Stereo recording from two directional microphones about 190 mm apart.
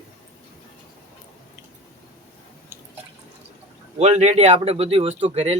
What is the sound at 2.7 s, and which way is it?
Drip, 10° right (ahead or behind).